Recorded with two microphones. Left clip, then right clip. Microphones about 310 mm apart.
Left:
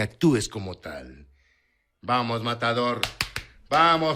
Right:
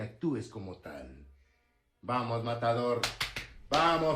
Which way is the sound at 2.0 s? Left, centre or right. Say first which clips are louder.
Left 8 dB; left.